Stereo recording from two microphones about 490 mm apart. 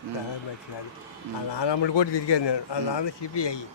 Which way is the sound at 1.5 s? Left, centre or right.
Left.